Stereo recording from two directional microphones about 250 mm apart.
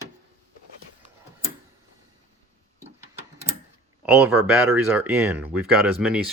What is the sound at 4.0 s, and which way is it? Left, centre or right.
Speech, centre.